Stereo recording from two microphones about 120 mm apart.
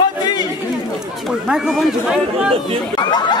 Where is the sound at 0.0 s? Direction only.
35° left (ahead or behind).